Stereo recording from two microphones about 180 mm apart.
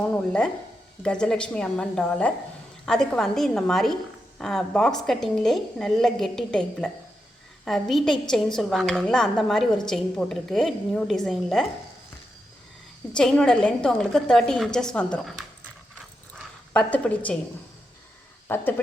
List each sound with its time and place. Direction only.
0.1 s a woman's voice: 5° left (ahead or behind)
13.1 s a woman's voice: 5° left (ahead or behind)
16.7 s a woman's voice: 5° left (ahead or behind)
18.4 s speech: 10° left (ahead or behind)